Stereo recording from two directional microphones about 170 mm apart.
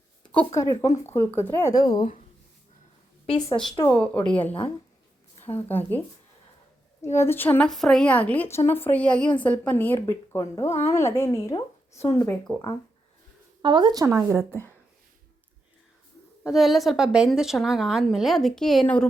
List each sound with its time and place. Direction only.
0.2 s a sound: 5° left (ahead or behind)
0.5 s speech: 20° left (ahead or behind)
1.7 s speech: 25° left (ahead or behind)
3.2 s a woman's voice: 30° left (ahead or behind)
3.8 s speech: 10° left (ahead or behind)
5.6 s speech: 10° left (ahead or behind)
7.0 s speech: 15° left (ahead or behind)
13.6 s speech: 30° right (ahead or behind)
16.4 s a woman's voice: centre (ahead or behind)